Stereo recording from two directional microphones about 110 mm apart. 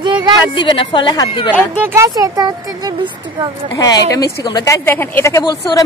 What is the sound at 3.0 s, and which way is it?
Speech, 50° right (ahead or behind).